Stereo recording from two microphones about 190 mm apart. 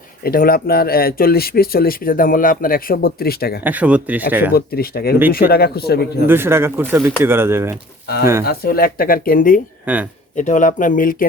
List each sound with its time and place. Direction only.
0.2 s speech: 50° left (ahead or behind)
3.6 s speech: 10° right (ahead or behind)
4.5 s speech: 55° left (ahead or behind)
6.2 s speech: 10° right (ahead or behind)
8.0 s speech: 55° left (ahead or behind)
9.8 s speech: 10° right (ahead or behind)
10.3 s speech: 40° left (ahead or behind)